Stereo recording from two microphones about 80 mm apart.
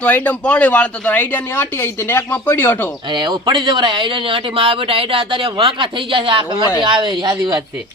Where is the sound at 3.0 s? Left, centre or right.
Right.